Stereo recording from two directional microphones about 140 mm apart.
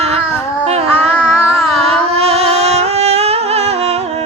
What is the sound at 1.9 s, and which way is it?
Music, 45° right (ahead or behind).